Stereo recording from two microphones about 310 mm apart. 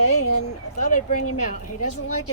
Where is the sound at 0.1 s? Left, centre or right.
Left.